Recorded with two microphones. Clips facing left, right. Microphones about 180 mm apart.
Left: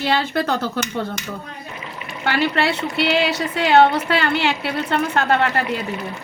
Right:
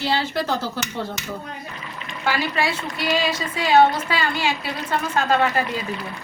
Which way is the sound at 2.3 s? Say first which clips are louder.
Left 3 dB; 65° left (ahead or behind).